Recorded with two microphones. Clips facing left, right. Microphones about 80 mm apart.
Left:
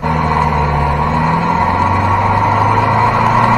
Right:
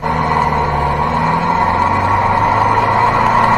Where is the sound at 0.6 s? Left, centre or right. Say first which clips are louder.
Even; right.